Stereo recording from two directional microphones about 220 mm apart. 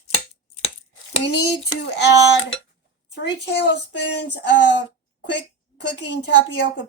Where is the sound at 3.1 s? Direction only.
50° left (ahead or behind).